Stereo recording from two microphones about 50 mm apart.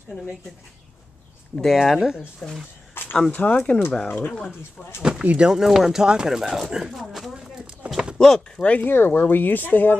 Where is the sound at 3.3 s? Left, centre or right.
Left.